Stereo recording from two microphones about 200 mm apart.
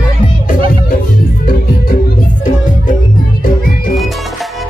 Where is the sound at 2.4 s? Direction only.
40° left (ahead or behind).